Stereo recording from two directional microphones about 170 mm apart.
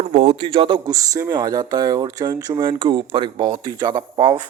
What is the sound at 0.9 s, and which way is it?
Speech, 20° right (ahead or behind).